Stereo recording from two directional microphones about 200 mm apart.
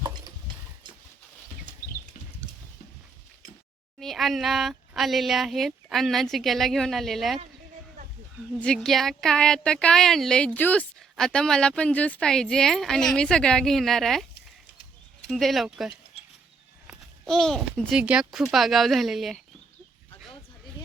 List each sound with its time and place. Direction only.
0.0 s a sound: 15° right (ahead or behind)
4.0 s speech: centre (ahead or behind)
8.6 s speech: 5° left (ahead or behind)
15.3 s a child's voice: centre (ahead or behind)